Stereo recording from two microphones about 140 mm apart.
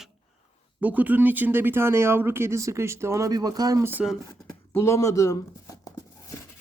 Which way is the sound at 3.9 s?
10° right (ahead or behind).